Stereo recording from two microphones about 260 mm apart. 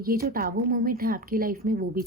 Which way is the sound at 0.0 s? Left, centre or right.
Right.